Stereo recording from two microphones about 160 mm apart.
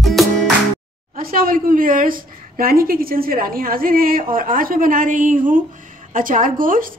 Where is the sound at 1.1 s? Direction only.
65° right (ahead or behind).